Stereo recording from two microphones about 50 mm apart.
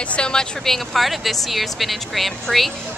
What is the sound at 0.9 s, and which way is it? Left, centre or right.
A woman's voice, centre.